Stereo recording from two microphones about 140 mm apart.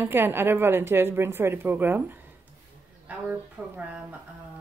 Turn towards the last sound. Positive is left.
turn(degrees=-10)  # may be behind; listen again after turning